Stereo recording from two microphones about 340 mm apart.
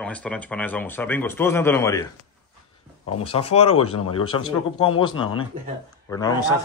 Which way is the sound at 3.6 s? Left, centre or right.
Left.